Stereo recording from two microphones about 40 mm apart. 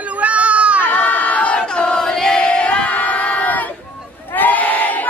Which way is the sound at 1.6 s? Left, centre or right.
Left.